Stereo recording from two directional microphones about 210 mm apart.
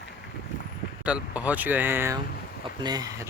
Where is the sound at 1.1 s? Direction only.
5° right (ahead or behind).